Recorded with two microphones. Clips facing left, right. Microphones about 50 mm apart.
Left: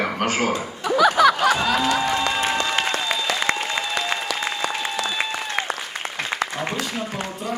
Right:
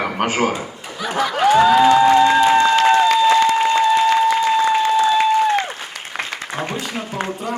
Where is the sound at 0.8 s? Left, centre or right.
Left.